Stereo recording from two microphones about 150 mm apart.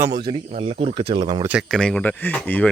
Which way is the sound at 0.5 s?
45° right (ahead or behind).